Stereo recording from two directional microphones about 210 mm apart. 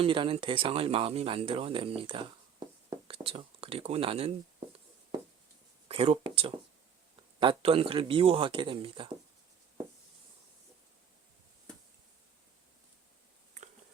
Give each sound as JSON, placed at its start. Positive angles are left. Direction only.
{"t": 0.0, "sound": "speech", "side_deg": -25}
{"t": 5.9, "sound": "speech", "side_deg": -25}